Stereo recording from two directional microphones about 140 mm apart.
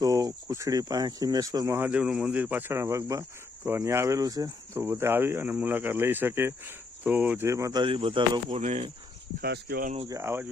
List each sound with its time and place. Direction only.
0.0 s speech: 25° right (ahead or behind)
8.6 s speech: 55° right (ahead or behind)
9.4 s speech: 90° right
10.1 s speech: 20° right (ahead or behind)